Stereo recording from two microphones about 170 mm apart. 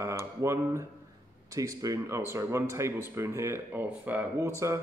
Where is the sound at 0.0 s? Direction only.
15° right (ahead or behind).